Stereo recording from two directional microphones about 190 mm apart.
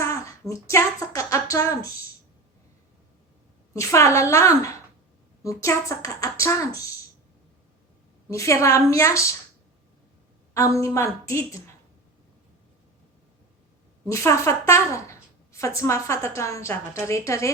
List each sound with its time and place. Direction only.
0.0 s speech: 15° left (ahead or behind)
3.8 s a woman's voice: 15° left (ahead or behind)
8.3 s a woman's voice: 15° left (ahead or behind)
10.5 s a woman's voice: 15° left (ahead or behind)
14.1 s a woman's voice: 15° left (ahead or behind)